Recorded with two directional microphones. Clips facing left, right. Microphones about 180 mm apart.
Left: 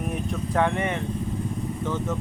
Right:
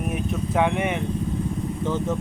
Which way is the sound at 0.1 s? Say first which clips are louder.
Right 3 dB; 10° right (ahead or behind).